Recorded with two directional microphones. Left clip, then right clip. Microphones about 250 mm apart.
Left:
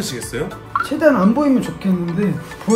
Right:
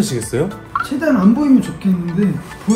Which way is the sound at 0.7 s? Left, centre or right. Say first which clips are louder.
Even; centre.